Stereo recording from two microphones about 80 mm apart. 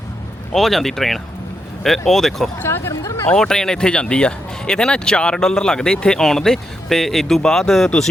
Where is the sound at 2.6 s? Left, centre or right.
Left.